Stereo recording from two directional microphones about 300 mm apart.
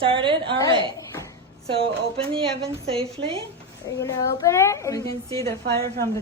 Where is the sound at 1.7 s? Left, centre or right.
Centre.